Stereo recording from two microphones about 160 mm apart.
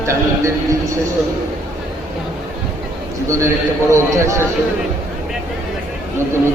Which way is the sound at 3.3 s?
15° right (ahead or behind).